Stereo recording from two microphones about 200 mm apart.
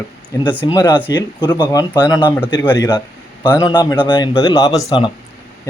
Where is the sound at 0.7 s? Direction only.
20° left (ahead or behind).